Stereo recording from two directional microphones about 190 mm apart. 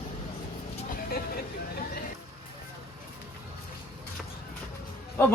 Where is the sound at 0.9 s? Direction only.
55° left (ahead or behind).